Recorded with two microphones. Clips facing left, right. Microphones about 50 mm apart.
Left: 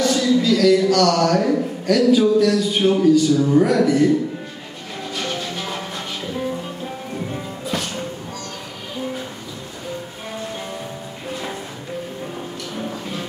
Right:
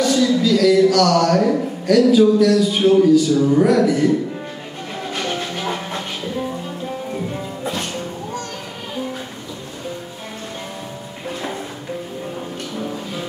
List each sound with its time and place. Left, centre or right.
0.0 s speech: centre
5.1 s music: right